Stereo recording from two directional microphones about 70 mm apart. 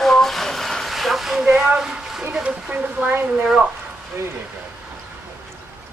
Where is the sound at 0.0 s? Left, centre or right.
Centre.